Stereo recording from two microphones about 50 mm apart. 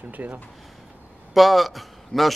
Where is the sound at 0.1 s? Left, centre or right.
Right.